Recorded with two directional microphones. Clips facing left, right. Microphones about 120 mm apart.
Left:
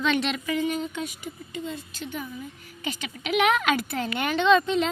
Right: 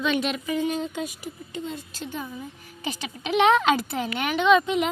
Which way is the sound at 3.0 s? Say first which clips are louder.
Right 3 dB; 25° right (ahead or behind).